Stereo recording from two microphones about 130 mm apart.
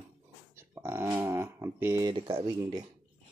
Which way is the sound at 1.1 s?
20° right (ahead or behind).